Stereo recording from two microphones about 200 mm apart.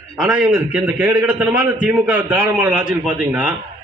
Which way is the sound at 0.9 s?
10° right (ahead or behind).